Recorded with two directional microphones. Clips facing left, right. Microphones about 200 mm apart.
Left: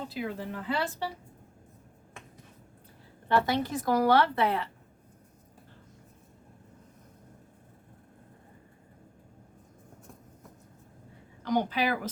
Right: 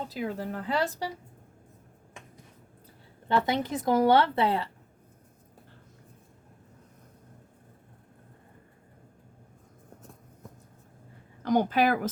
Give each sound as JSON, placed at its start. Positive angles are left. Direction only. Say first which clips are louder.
{"t": 0.1, "sound": "speech", "louder": "right 2 dB", "side_deg": -45}
{"t": 3.2, "sound": "a woman's voice", "louder": "even", "side_deg": -20}
{"t": 11.4, "sound": "speech", "louder": "right 4 dB", "side_deg": -50}